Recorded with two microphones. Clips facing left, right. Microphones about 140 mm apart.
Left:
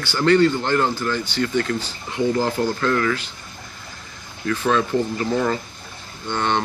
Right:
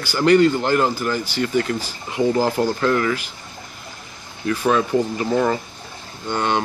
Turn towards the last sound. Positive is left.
turn(degrees=-10)  # may be behind; listen again after turning